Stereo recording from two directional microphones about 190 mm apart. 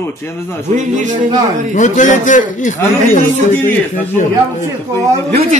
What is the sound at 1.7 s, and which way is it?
A man's voice, 40° left (ahead or behind).